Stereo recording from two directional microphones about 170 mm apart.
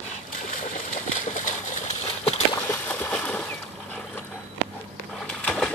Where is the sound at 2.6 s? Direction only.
10° left (ahead or behind).